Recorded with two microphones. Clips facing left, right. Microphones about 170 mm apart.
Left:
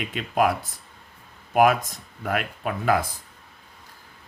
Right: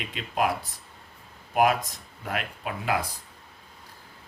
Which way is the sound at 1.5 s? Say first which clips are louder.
Left 4 dB; 50° left (ahead or behind).